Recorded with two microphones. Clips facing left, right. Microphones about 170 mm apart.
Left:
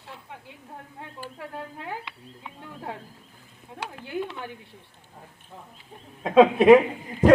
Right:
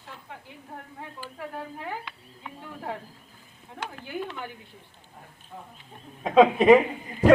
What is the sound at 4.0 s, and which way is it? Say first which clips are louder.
Speech: left 3 dB; 25° left (ahead or behind).